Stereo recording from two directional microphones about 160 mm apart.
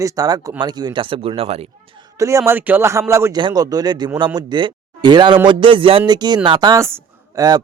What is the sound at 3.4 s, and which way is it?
A man's voice, 25° right (ahead or behind).